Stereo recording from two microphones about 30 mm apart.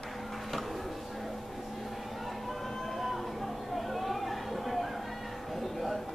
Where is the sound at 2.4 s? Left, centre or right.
Centre.